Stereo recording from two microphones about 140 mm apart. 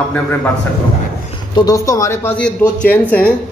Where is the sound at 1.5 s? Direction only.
25° left (ahead or behind).